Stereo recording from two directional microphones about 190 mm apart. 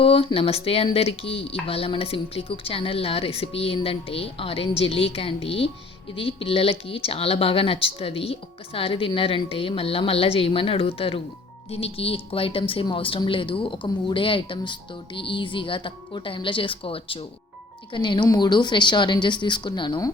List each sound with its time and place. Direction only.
0.0 s speech: 30° left (ahead or behind)